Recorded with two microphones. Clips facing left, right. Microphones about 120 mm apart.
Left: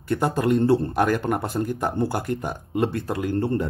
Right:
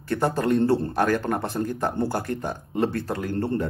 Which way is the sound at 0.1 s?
5° left (ahead or behind).